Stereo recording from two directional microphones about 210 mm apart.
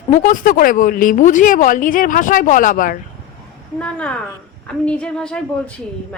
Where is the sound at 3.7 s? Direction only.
5° left (ahead or behind).